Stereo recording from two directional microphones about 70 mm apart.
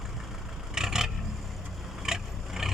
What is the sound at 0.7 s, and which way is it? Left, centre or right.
Vehicle, centre.